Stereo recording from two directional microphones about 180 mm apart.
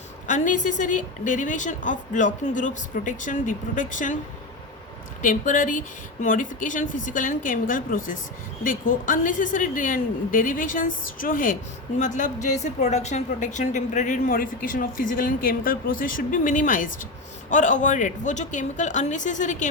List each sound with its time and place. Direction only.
0.3 s a woman's voice: 45° left (ahead or behind)
5.2 s a woman's voice: 45° left (ahead or behind)